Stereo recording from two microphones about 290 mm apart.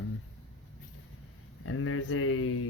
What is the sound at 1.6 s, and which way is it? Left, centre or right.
Speech, left.